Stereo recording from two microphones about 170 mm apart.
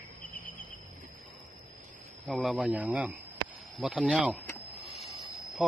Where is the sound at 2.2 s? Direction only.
Centre (ahead or behind).